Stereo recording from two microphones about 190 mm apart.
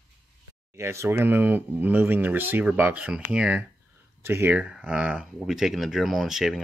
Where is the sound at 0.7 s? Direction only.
15° right (ahead or behind).